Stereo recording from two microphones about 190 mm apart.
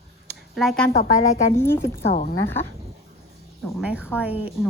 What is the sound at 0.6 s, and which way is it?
Speech, centre (ahead or behind).